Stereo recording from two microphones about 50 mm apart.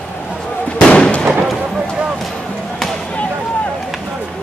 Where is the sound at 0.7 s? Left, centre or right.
Centre.